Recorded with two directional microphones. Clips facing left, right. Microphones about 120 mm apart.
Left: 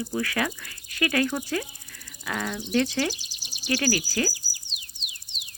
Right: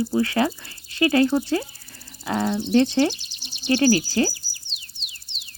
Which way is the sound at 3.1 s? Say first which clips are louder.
Right 1 dB; 5° left (ahead or behind).